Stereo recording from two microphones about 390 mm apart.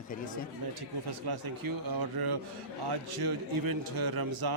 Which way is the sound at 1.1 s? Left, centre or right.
Right.